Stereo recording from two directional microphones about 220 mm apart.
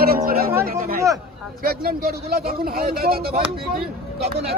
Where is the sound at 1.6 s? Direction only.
45° right (ahead or behind).